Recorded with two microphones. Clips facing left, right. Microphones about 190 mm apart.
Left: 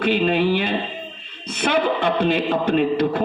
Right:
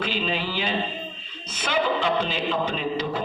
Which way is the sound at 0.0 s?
60° left (ahead or behind).